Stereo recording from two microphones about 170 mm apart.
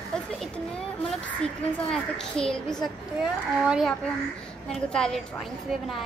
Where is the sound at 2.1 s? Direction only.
5° left (ahead or behind).